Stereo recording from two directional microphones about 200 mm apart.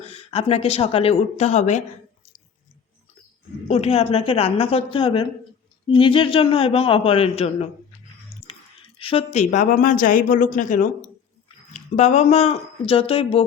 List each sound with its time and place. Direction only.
0.0 s speech: 30° left (ahead or behind)
3.7 s a man's voice: 30° left (ahead or behind)
8.3 s chewing: 30° left (ahead or behind)
9.0 s speech: 30° left (ahead or behind)